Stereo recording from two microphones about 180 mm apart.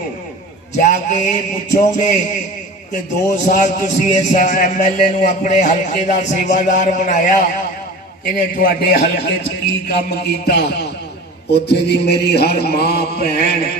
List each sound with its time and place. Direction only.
0.8 s a man's voice: 45° left (ahead or behind)
8.4 s mantra: 50° left (ahead or behind)
10.4 s a man's voice: 65° left (ahead or behind)
11.5 s mantra: 65° left (ahead or behind)